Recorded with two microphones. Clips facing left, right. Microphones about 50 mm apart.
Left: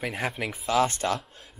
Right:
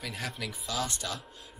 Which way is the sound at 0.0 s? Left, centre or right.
Left.